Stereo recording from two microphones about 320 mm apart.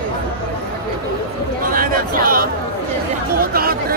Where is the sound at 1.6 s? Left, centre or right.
Right.